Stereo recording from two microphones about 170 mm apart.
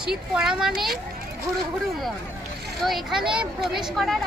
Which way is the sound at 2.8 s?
Centre (ahead or behind).